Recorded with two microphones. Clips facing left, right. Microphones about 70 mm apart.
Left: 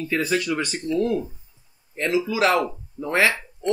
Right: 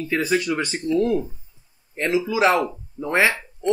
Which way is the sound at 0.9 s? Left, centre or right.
Centre.